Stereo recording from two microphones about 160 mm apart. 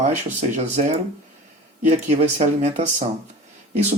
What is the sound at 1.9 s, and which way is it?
Speech, 45° right (ahead or behind).